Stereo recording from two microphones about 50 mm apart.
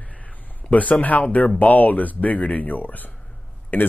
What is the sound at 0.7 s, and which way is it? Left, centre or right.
Speech, left.